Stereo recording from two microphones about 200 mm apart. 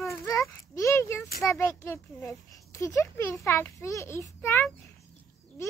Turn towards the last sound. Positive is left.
turn(degrees=10)  # may be behind; listen again after turning